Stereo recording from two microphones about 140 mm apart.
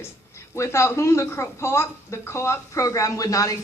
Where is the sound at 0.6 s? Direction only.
20° left (ahead or behind).